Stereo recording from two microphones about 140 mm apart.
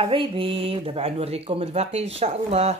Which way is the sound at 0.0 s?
40° right (ahead or behind).